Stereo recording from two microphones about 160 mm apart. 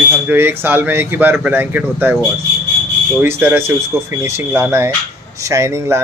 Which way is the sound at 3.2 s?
15° right (ahead or behind).